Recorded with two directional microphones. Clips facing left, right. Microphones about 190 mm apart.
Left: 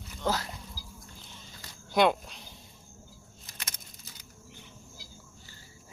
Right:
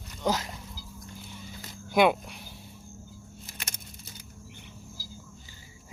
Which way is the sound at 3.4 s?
25° right (ahead or behind).